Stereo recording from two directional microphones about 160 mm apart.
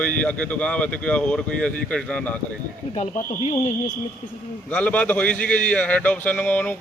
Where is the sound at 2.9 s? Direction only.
35° left (ahead or behind).